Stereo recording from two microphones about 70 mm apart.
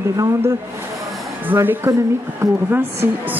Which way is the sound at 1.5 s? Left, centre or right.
Right.